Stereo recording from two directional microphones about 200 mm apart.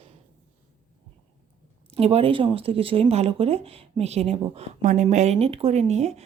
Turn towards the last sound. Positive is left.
turn(degrees=-35)  # may be behind; listen again after turning